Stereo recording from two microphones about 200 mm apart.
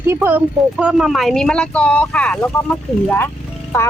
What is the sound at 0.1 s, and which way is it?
Speech, 10° right (ahead or behind).